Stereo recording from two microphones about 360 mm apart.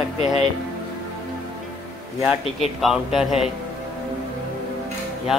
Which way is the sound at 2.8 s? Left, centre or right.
Centre.